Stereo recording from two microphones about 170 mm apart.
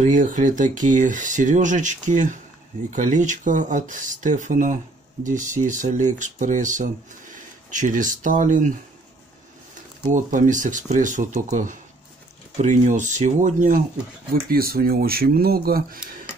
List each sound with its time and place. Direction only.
0.0 s speech: 50° right (ahead or behind)
10.1 s speech: 50° right (ahead or behind)
14.3 s speech: 60° right (ahead or behind)